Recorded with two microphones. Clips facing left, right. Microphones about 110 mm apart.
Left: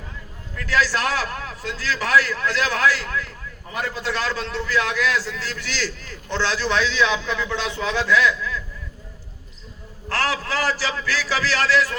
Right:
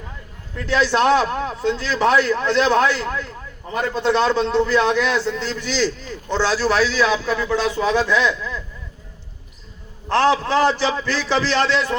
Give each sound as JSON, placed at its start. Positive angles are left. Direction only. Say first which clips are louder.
{"t": 0.5, "sound": "a man's voice", "louder": "right 4 dB", "side_deg": -25}
{"t": 10.1, "sound": "a man's voice", "louder": "right 8 dB", "side_deg": -25}